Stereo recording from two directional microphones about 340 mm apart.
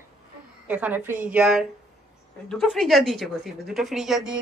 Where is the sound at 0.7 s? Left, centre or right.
Centre.